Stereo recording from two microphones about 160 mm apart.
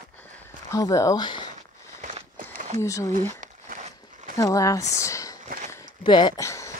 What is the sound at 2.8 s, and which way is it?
Speech, 20° left (ahead or behind).